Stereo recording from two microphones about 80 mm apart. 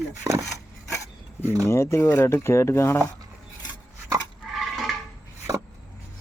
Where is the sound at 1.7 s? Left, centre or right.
Left.